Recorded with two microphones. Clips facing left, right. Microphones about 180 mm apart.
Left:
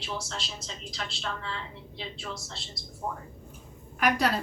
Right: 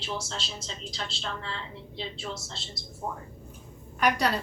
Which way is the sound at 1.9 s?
25° right (ahead or behind).